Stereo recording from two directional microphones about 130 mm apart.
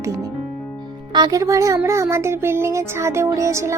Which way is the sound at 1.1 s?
30° right (ahead or behind).